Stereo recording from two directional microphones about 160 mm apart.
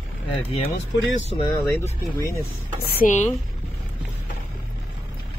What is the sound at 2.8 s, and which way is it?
Speech, 65° left (ahead or behind).